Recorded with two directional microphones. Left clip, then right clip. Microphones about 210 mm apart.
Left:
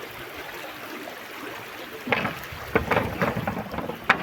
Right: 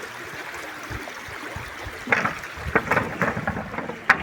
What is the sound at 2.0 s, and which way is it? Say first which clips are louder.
Boat: right 4 dB; 5° left (ahead or behind).